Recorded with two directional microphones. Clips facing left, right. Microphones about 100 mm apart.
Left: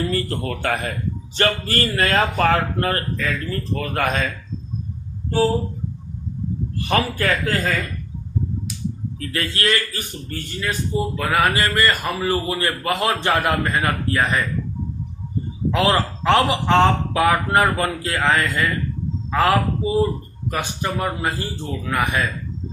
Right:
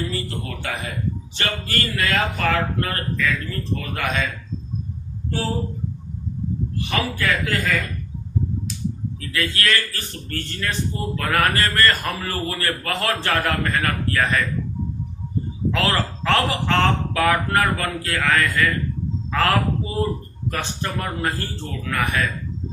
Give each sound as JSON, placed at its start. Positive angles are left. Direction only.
{"t": 0.1, "sound": "speech", "side_deg": 45}
{"t": 1.4, "sound": "speech", "side_deg": 40}
{"t": 3.8, "sound": "speech", "side_deg": 45}
{"t": 6.7, "sound": "speech", "side_deg": 40}
{"t": 9.1, "sound": "a man's voice", "side_deg": 35}
{"t": 15.7, "sound": "a man's voice", "side_deg": 15}